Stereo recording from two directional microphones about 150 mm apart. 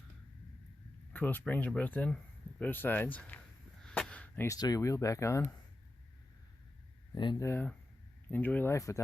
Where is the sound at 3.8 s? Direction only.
5° left (ahead or behind).